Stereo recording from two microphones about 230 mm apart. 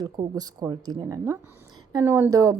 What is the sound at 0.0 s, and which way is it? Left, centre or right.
A woman's voice, centre.